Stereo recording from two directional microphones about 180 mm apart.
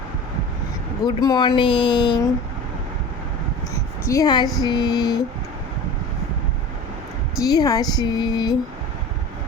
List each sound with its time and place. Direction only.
1.0 s speech: 20° left (ahead or behind)
4.0 s speech: 20° left (ahead or behind)
7.4 s speech: 20° left (ahead or behind)